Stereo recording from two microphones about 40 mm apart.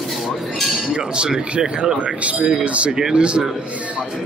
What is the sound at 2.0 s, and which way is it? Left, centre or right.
Speech, right.